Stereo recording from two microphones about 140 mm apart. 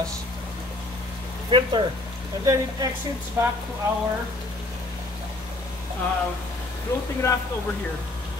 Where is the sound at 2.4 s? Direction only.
25° right (ahead or behind).